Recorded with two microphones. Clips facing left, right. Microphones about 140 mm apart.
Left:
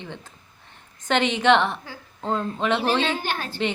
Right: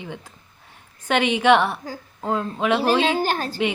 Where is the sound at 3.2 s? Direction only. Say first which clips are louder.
Right 6 dB; 40° right (ahead or behind).